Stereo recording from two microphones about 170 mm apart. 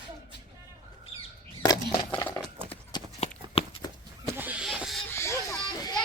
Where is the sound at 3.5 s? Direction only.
35° left (ahead or behind).